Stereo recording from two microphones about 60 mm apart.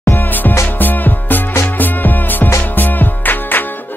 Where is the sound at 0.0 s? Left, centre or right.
Left.